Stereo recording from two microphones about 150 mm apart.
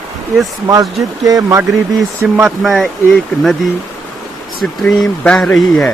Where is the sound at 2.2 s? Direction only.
5° right (ahead or behind).